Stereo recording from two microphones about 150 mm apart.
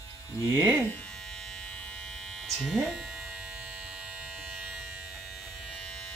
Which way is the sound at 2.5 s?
5° right (ahead or behind).